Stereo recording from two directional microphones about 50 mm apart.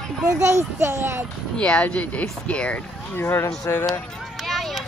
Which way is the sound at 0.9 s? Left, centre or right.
Right.